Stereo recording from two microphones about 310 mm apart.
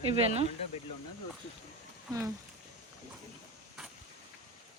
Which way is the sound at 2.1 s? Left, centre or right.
Centre.